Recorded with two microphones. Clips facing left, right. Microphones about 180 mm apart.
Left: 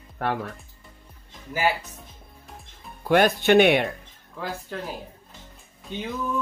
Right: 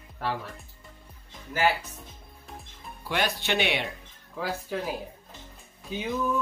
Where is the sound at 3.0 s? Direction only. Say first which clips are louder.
Left 10 dB; 50° left (ahead or behind).